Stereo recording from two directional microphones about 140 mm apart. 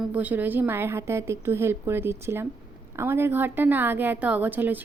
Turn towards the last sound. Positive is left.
turn(degrees=-15)  # may be behind; listen again after turning